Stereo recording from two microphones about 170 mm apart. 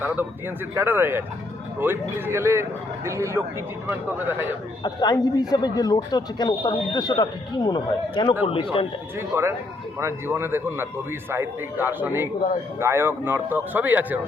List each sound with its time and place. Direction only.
0.7 s a man's voice: 15° right (ahead or behind)
4.8 s speech: 25° left (ahead or behind)
9.1 s a man's voice: 15° right (ahead or behind)